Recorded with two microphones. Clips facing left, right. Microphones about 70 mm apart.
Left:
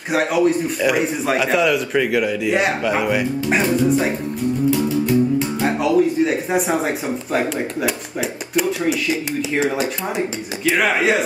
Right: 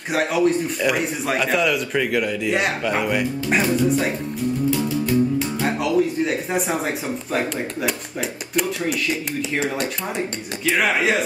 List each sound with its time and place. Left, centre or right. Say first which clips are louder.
0.1 s a man's voice: left 2 dB; centre